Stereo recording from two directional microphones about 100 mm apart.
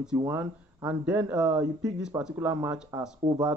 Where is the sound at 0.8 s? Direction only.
10° right (ahead or behind).